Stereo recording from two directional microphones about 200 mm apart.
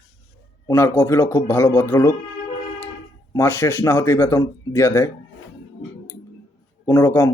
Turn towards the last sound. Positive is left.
turn(degrees=15)  # may be behind; listen again after turning